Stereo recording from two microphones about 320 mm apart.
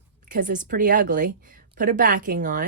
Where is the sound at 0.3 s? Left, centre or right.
Right.